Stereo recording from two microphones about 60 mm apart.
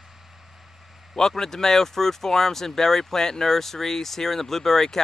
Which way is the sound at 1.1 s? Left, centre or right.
Centre.